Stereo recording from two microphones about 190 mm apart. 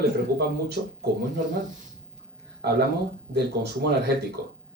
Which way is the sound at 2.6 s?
60° right (ahead or behind).